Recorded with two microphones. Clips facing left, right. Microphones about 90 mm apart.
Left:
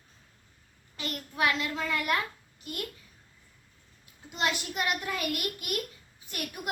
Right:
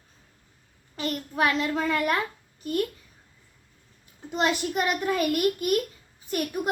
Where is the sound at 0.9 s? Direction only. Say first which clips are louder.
Right 7 dB; 40° right (ahead or behind).